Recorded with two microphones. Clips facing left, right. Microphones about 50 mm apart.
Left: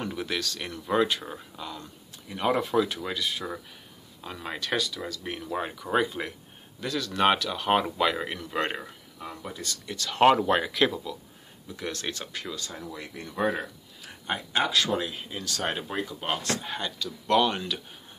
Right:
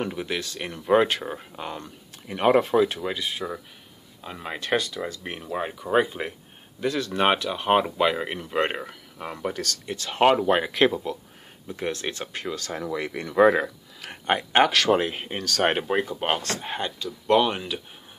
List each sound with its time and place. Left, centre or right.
0.1 s speech: centre; by 2.7 s right
2.7 s speech: right
4.6 s speech: right
5.2 s speech: right
5.5 s speech: centre
8.8 s speech: right
9.5 s speech: right
9.8 s speech: right
10.2 s speech: centre
10.7 s speech: right
12.5 s speech: right
15.9 s speech: right
16.7 s speech: right